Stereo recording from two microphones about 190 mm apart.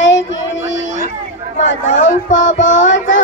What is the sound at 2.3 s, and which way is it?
Child singing, 80° left.